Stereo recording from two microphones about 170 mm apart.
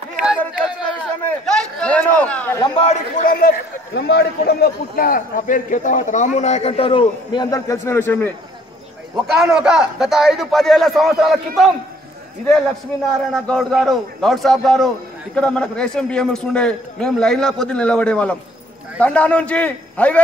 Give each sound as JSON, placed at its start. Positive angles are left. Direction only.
{"t": 1.2, "sound": "a sound", "side_deg": 5}
{"t": 2.8, "sound": "a man's voice", "side_deg": 45}
{"t": 7.4, "sound": "a man's voice", "side_deg": 20}
{"t": 9.1, "sound": "a man's voice", "side_deg": -5}
{"t": 13.3, "sound": "a man's voice", "side_deg": 5}